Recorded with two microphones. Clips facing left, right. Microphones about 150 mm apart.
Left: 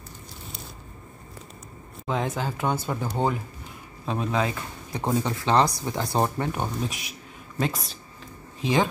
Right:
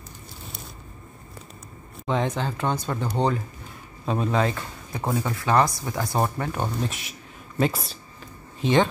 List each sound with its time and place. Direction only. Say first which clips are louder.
2.0 s speech: right 2 dB; centre (ahead or behind)
5.1 s speech: even; 25° left (ahead or behind)
6.8 s speech: right 1 dB; centre (ahead or behind)